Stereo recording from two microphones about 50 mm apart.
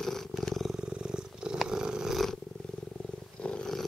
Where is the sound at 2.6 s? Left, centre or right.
Left.